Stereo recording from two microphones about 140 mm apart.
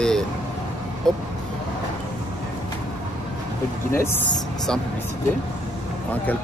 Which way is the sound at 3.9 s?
20° left (ahead or behind).